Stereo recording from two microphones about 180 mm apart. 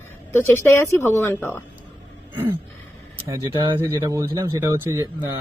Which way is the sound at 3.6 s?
15° right (ahead or behind).